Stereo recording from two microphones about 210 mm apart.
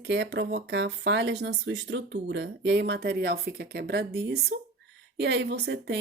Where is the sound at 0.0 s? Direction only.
55° right (ahead or behind).